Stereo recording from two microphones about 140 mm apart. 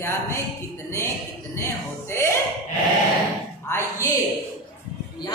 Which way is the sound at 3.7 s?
20° left (ahead or behind).